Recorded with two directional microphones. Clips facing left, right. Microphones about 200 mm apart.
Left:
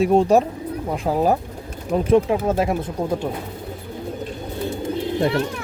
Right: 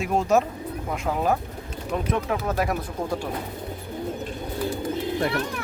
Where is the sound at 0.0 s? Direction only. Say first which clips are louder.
Left 6 dB; 30° left (ahead or behind).